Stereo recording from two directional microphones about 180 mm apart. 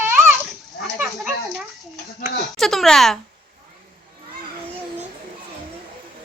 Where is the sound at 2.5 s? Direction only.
Centre (ahead or behind).